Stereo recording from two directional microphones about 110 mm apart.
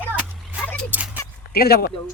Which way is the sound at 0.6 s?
10° left (ahead or behind).